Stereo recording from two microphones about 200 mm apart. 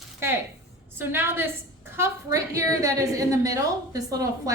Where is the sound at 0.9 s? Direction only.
10° right (ahead or behind).